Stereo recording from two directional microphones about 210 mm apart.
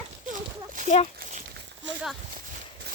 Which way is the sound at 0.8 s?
30° left (ahead or behind).